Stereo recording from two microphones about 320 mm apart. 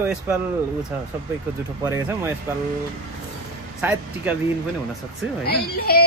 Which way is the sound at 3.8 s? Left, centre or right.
Centre.